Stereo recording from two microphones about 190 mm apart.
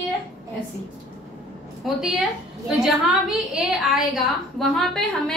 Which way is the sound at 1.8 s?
Centre (ahead or behind).